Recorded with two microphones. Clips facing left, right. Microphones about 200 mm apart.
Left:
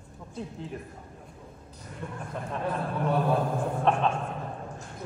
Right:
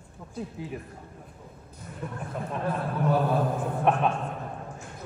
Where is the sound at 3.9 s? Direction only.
10° right (ahead or behind).